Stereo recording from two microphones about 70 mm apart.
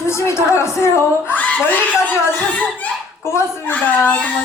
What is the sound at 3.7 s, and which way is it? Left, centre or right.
Speech, left.